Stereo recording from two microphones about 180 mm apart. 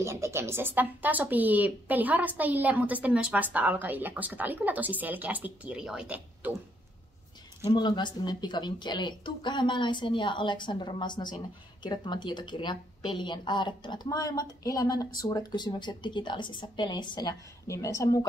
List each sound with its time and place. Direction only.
0.0 s speech: 15° right (ahead or behind)
7.6 s speech: 25° left (ahead or behind)